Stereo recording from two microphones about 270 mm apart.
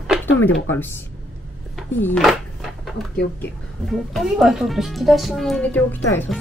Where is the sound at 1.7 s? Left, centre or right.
Centre.